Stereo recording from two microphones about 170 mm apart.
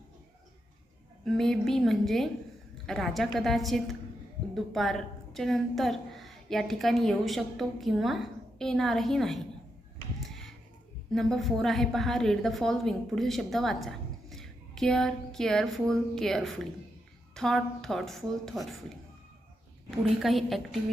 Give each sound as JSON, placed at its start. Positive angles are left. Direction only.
{"t": 1.2, "sound": "a woman's voice", "side_deg": 5}
{"t": 10.2, "sound": "a sound", "side_deg": 0}
{"t": 11.1, "sound": "a woman's voice", "side_deg": 0}
{"t": 20.1, "sound": "a woman's voice", "side_deg": 0}